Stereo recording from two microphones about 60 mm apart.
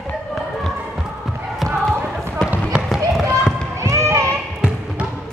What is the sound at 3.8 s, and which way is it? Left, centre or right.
Basketball bounce, right.